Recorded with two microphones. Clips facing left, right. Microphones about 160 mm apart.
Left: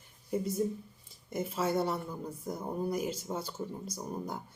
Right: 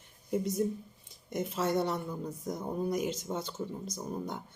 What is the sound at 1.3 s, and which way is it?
Speech, 5° left (ahead or behind).